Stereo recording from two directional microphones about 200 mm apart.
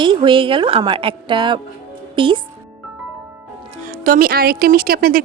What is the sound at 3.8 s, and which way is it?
Speech, 45° right (ahead or behind).